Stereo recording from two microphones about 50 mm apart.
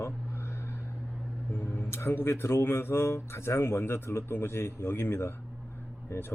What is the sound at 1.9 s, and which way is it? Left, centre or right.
A man's voice, left.